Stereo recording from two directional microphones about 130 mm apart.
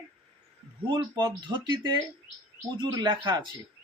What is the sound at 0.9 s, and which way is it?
Speech, 35° right (ahead or behind).